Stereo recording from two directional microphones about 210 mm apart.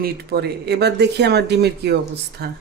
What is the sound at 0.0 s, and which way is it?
Speech, 50° right (ahead or behind).